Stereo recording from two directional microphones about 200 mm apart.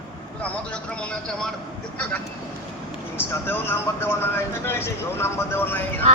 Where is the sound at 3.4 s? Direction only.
10° left (ahead or behind).